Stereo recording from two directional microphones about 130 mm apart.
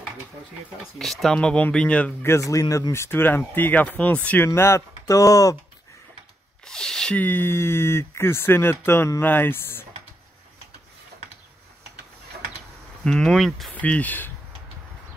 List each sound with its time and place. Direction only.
0.9 s speech: centre (ahead or behind)
2.3 s speech: 25° left (ahead or behind)
6.6 s speech: 5° left (ahead or behind)
13.0 s speech: 5° left (ahead or behind)
13.7 s speech: 10° left (ahead or behind)